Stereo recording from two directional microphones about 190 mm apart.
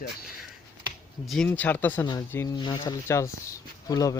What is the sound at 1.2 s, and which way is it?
Speech, centre (ahead or behind).